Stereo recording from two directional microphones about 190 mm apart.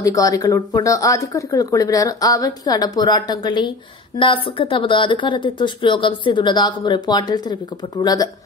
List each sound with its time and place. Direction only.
0.0 s speech: 15° left (ahead or behind)